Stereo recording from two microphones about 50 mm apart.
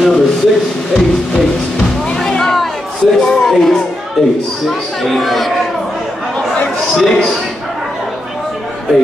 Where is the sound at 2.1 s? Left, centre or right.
Centre.